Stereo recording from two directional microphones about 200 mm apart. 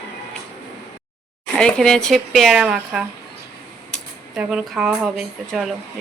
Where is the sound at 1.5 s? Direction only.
5° left (ahead or behind).